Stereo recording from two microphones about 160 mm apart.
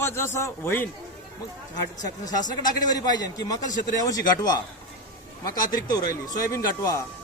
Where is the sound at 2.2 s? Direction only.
25° left (ahead or behind).